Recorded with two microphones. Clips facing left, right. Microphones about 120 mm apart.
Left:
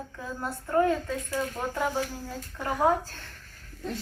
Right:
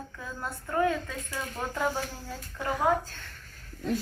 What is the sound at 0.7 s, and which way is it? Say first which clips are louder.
Speech: left 3 dB; 30° left (ahead or behind).